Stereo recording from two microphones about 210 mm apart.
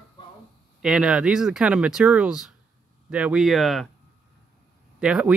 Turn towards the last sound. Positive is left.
turn(degrees=-5)  # may be behind; listen again after turning